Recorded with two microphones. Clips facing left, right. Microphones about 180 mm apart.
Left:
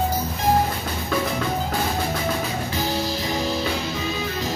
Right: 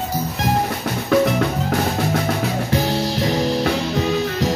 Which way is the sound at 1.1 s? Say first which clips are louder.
Right 8 dB; 70° right (ahead or behind).